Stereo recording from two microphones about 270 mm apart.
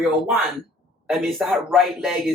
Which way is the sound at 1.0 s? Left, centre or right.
Centre.